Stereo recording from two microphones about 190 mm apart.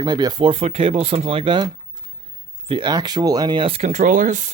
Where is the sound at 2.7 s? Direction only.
25° right (ahead or behind); by 4.5 s 40° right (ahead or behind).